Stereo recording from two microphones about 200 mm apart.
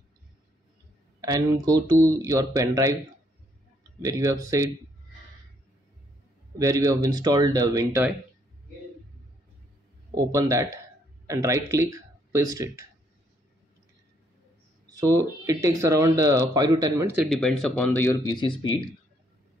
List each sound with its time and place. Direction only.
1.2 s speech: 20° right (ahead or behind)
4.0 s speech: 15° right (ahead or behind)
6.6 s speech: 15° right (ahead or behind)
10.1 s speech: 15° right (ahead or behind)
15.1 s speech: 15° right (ahead or behind)
17.3 s speech: 5° left (ahead or behind); by 18.9 s 25° left (ahead or behind)